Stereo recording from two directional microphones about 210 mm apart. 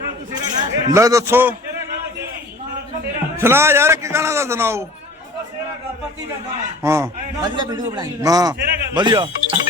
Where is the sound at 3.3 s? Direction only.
10° right (ahead or behind).